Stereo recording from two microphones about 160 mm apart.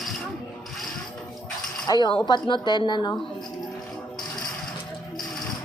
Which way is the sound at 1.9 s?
25° left (ahead or behind).